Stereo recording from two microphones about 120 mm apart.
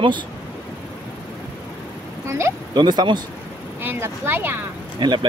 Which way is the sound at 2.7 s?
35° right (ahead or behind).